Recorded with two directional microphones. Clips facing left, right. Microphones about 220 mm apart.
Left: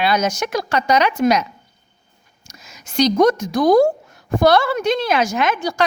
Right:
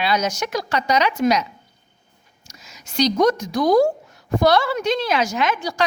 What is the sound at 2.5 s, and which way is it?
A woman's voice, 50° left (ahead or behind).